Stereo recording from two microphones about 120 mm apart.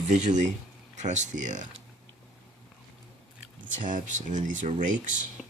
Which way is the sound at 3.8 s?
90° right.